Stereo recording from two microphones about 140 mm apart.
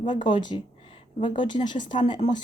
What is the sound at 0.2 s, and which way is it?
Speech, 35° left (ahead or behind).